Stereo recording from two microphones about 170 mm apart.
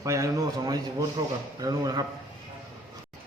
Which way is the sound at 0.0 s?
20° right (ahead or behind).